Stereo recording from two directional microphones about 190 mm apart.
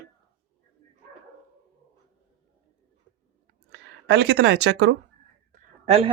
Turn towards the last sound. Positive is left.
turn(degrees=-35)  # may be behind; listen again after turning